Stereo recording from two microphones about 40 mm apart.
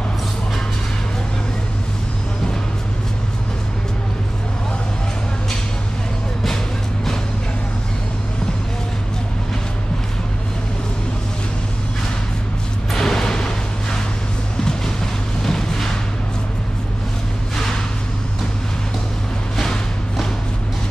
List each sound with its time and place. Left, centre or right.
12.9 s music: centre
15.4 s a sound: centre
19.5 s music: centre